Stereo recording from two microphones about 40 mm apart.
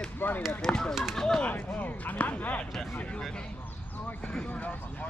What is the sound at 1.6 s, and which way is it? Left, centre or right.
Speech, left.